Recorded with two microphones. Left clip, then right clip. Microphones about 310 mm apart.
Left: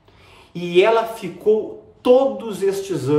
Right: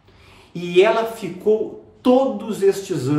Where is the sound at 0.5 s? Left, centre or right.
Centre.